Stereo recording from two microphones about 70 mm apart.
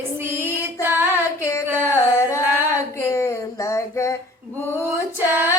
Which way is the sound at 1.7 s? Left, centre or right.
Right.